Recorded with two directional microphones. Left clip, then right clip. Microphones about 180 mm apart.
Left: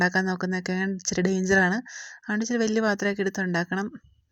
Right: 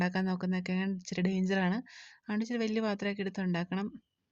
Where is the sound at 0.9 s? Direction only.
5° left (ahead or behind).